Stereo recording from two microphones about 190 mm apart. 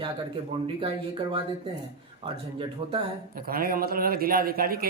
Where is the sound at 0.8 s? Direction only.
30° right (ahead or behind).